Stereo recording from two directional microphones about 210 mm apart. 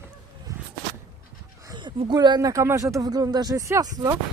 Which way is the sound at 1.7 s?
20° right (ahead or behind).